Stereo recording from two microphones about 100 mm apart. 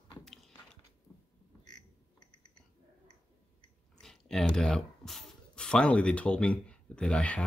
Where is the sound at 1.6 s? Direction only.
45° left (ahead or behind).